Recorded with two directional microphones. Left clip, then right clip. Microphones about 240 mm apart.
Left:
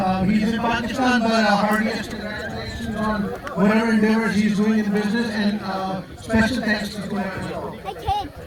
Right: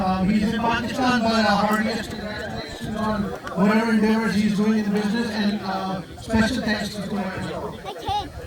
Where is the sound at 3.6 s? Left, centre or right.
Right.